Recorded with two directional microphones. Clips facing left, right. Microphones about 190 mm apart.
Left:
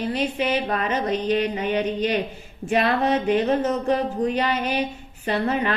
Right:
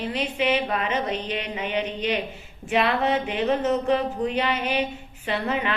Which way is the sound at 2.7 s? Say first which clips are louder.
Left 2 dB; 40° left (ahead or behind).